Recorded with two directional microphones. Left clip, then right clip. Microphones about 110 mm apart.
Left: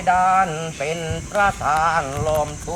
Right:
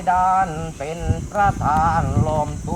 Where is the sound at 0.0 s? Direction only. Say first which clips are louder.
Left 1 dB; 15° left (ahead or behind).